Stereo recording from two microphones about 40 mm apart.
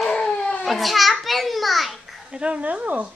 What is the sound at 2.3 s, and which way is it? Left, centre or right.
Speech, right.